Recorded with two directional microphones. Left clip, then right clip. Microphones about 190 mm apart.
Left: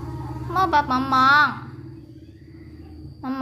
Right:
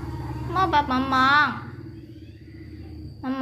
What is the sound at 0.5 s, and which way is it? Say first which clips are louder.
Speech: left 2 dB; 10° left (ahead or behind).